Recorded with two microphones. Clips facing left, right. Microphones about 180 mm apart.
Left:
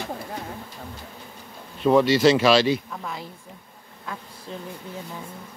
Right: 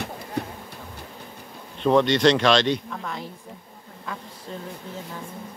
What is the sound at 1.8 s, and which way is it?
Speech, 5° left (ahead or behind).